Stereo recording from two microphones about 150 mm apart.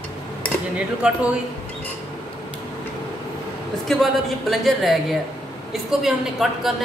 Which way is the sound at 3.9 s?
Centre (ahead or behind).